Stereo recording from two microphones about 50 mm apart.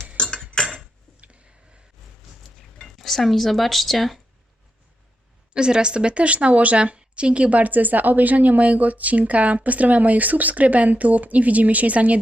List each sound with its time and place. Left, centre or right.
0.2 s cutlery: centre
0.7 s a sound: right
2.9 s speech: centre
5.5 s a woman's voice: centre